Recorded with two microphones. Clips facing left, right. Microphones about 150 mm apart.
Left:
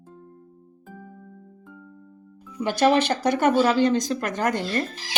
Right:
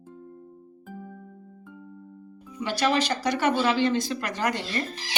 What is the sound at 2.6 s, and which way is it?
Speech, 50° left (ahead or behind).